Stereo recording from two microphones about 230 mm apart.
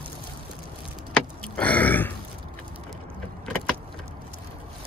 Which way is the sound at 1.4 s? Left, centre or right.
Centre.